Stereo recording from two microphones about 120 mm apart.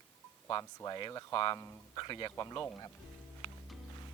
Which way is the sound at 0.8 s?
35° left (ahead or behind).